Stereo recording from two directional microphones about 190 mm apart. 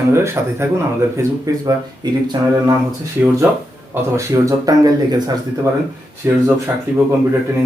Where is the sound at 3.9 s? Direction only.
15° right (ahead or behind).